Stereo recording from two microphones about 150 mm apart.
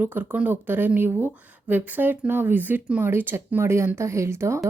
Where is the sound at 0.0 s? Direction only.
10° right (ahead or behind).